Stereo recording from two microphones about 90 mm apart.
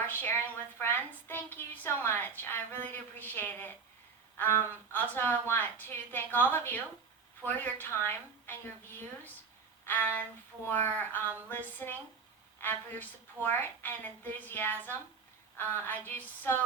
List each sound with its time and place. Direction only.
0.1 s a woman's voice: 20° left (ahead or behind)